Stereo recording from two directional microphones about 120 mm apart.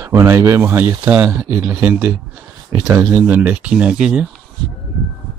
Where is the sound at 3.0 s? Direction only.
15° right (ahead or behind).